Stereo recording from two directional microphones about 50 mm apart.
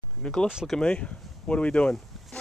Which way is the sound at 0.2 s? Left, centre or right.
Centre.